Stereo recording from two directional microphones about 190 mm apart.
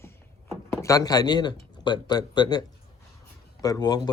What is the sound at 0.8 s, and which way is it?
Speech, 15° left (ahead or behind).